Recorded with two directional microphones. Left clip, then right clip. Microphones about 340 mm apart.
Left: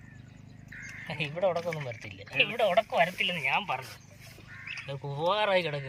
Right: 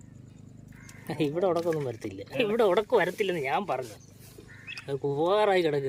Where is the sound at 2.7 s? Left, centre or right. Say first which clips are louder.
Right 1 dB; centre.